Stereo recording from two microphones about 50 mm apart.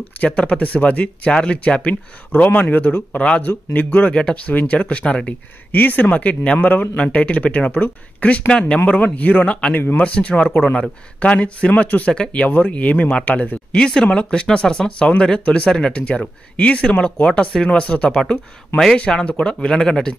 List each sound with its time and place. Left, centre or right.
0.2 s speech: left
3.2 s speech: left
3.4 s speech: left
5.7 s speech: left; by 17.6 s centre
17.6 s speech: left